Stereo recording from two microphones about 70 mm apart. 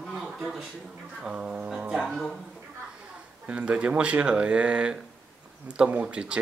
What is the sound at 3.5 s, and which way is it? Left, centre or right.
Speech, centre.